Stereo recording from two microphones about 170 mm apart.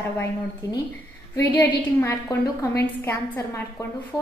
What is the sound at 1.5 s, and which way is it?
A woman's voice, 10° left (ahead or behind).